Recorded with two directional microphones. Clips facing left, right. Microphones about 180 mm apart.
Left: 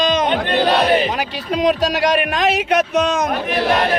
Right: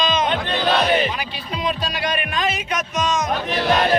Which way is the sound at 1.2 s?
75° left (ahead or behind).